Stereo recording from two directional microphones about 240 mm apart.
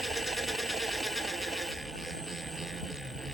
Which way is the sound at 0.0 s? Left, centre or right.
Centre.